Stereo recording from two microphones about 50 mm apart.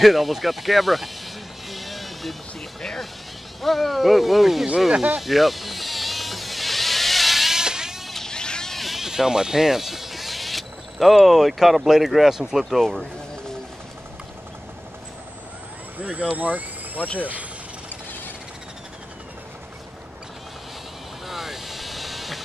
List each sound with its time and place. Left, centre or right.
0.0 s a sound: centre
2.8 s music: centre
3.6 s speech: centre
5.2 s vehicle: centre
8.1 s vehicle: centre
8.7 s speech: centre
16.0 s speech: right
21.3 s vehicle: centre